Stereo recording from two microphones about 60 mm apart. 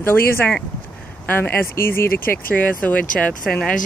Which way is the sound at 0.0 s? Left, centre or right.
Left.